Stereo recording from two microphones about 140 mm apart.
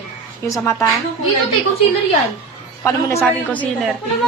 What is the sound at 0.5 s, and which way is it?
Speech, 20° left (ahead or behind).